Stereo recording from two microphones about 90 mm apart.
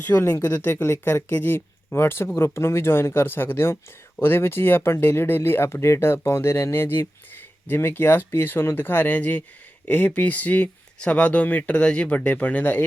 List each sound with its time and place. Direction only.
0.0 s speech: 25° left (ahead or behind)